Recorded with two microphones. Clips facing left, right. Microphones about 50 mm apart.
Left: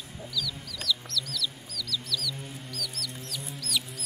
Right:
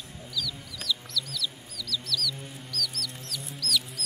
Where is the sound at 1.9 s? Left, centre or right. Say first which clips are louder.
Right 2 dB; centre.